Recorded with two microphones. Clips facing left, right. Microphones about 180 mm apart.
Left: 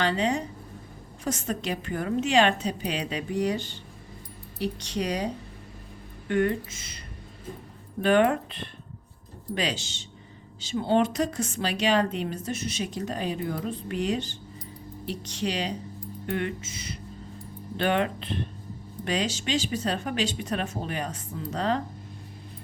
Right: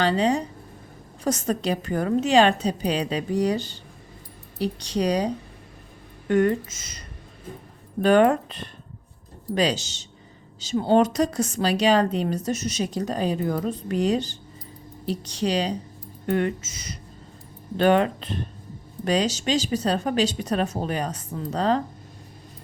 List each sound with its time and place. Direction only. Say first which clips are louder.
0.0 s a woman's voice: right 4 dB; 35° right (ahead or behind)
8.0 s a woman's voice: right 4 dB; 40° right (ahead or behind)